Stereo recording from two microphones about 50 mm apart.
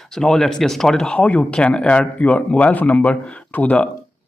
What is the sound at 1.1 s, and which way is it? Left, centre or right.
Speech, left.